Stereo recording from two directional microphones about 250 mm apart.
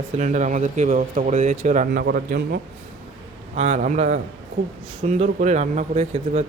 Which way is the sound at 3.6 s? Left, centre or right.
Right.